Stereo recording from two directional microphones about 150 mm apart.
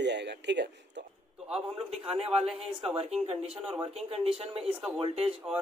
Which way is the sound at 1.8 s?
40° right (ahead or behind).